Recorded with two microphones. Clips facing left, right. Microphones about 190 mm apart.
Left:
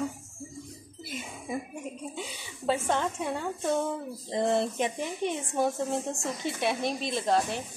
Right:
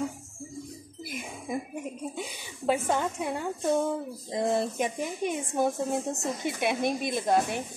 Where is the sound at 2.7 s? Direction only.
10° right (ahead or behind).